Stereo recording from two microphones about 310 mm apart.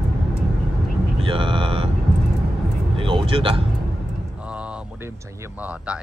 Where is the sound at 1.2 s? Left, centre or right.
Centre.